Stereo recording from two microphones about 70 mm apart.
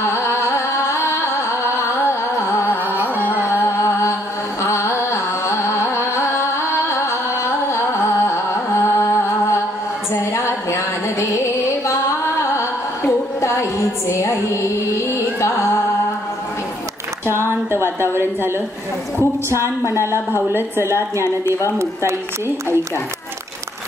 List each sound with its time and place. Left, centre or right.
0.1 s music: left
3.4 s music: left
4.6 s carnatic music: left
6.9 s music: left
17.8 s a woman's voice: right
19.5 s a woman's voice: right